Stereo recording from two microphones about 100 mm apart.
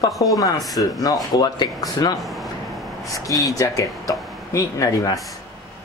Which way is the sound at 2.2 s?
Centre (ahead or behind).